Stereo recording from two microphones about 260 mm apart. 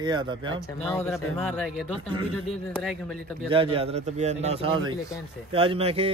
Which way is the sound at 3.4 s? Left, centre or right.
Centre.